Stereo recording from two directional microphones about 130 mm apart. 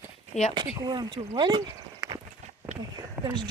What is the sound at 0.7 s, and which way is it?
Speech, 30° right (ahead or behind).